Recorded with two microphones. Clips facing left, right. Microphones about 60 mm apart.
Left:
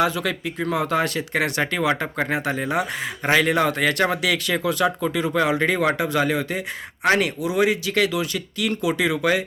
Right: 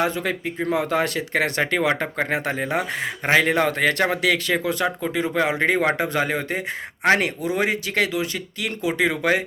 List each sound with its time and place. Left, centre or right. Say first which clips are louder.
0.0 s speech: left 1 dB; right